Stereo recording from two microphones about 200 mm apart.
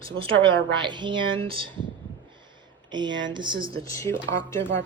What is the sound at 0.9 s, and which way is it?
Speech, 25° right (ahead or behind).